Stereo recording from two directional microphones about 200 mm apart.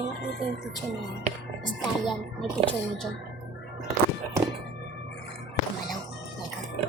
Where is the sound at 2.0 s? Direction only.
5° left (ahead or behind).